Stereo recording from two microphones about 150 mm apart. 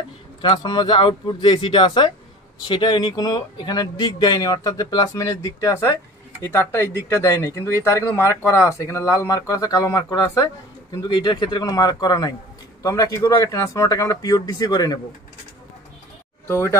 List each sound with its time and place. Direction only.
0.4 s speech: 30° left (ahead or behind)
16.4 s speech: 20° left (ahead or behind)